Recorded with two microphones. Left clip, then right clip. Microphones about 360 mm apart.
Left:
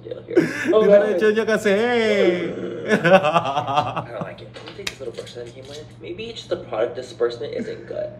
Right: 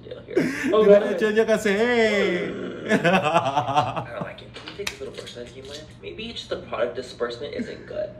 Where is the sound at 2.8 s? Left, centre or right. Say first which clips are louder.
Left 5 dB; centre.